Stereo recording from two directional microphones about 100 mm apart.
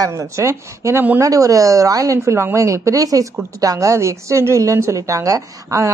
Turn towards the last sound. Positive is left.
turn(degrees=-35)  # may be behind; listen again after turning